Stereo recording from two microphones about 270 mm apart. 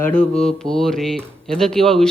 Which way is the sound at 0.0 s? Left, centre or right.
Centre.